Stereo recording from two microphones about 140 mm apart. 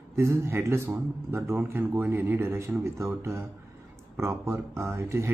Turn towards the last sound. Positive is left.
turn(degrees=-20)  # may be behind; listen again after turning